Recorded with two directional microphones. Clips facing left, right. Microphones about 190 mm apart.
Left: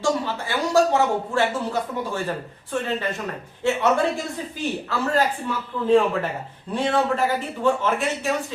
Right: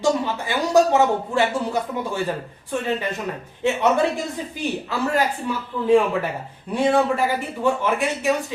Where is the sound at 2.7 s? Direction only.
15° right (ahead or behind).